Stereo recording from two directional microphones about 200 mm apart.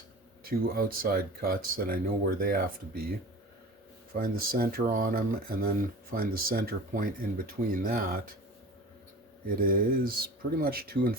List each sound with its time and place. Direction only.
0.4 s speech: 45° right (ahead or behind)
4.1 s speech: 45° right (ahead or behind)
9.6 s speech: 45° right (ahead or behind)